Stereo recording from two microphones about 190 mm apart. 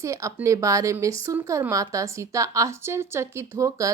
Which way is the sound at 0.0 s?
15° right (ahead or behind).